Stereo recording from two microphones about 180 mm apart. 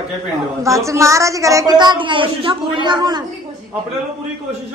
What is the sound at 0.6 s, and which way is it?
A woman's voice, 15° right (ahead or behind).